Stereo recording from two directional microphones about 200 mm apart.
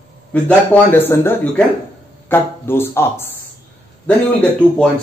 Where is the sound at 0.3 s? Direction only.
10° left (ahead or behind).